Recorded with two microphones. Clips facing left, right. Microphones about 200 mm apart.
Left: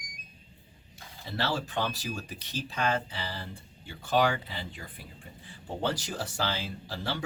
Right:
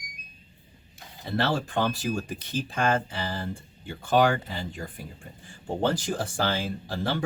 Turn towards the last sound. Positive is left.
turn(degrees=-50)  # may be behind; listen again after turning